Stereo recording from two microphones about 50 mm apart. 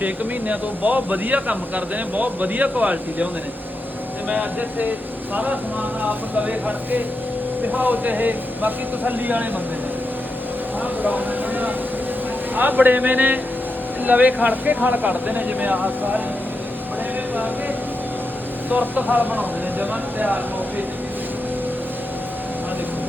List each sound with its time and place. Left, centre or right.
0.0 s speech: right
4.3 s speech: right
11.0 s speech: right
18.7 s speech: right